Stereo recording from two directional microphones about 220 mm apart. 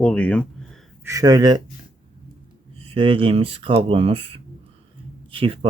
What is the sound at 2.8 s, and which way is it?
Speech, 25° right (ahead or behind).